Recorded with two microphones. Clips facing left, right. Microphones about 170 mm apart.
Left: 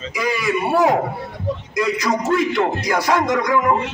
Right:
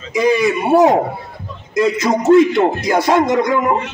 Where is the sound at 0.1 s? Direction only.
20° right (ahead or behind).